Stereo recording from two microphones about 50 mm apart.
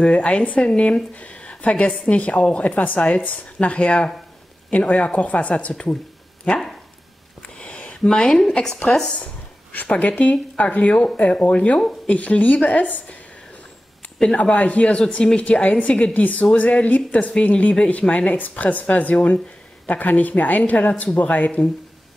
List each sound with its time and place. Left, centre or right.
0.0 s speech: left
3.6 s speech: left
7.5 s a sound: left
8.1 s a woman's voice: centre
9.1 s speech: left
14.3 s speech: left